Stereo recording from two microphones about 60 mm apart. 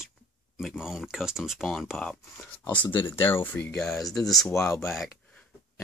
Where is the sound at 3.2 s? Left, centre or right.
Left.